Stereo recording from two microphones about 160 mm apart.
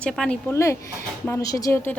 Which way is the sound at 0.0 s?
5° left (ahead or behind).